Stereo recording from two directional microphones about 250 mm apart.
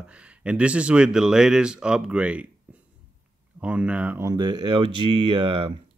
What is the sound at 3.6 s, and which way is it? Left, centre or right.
Speech, centre.